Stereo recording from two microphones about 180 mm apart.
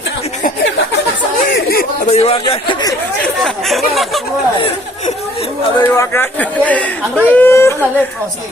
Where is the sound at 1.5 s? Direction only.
55° left (ahead or behind).